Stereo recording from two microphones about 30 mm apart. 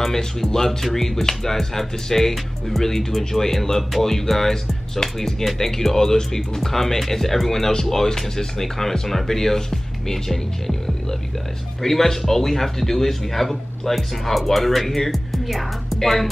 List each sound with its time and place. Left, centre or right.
0.0 s speech: centre